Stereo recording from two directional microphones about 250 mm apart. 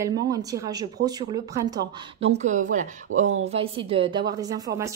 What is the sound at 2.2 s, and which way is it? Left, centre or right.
Speech, right.